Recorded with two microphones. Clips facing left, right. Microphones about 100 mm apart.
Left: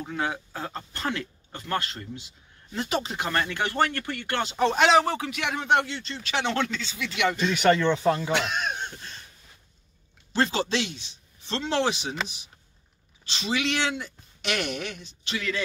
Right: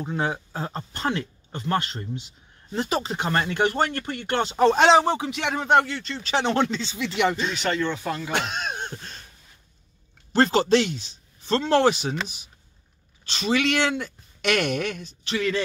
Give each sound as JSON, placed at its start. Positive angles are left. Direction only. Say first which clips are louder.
{"t": 0.0, "sound": "speech", "louder": "right 3 dB", "side_deg": -30}
{"t": 2.7, "sound": "speech", "louder": "right 3 dB", "side_deg": -35}
{"t": 4.5, "sound": "speech", "louder": "right 4 dB", "side_deg": -35}
{"t": 5.5, "sound": "speech", "louder": "right 4 dB", "side_deg": -40}
{"t": 6.1, "sound": "speech", "louder": "right 4 dB", "side_deg": -35}
{"t": 8.0, "sound": "speech", "louder": "left 6 dB", "side_deg": 25}
{"t": 8.3, "sound": "speech", "louder": "left 1 dB", "side_deg": -50}
{"t": 8.6, "sound": "a sound", "louder": "even", "side_deg": -40}
{"t": 10.3, "sound": "speech", "louder": "right 6 dB", "side_deg": -45}
{"t": 13.3, "sound": "speech", "louder": "right 5 dB", "side_deg": -45}